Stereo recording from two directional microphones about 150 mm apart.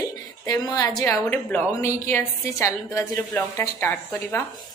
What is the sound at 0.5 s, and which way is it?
A woman's voice, 25° left (ahead or behind).